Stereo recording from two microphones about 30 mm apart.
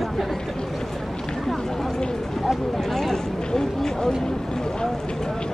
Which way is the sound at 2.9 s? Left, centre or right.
Centre.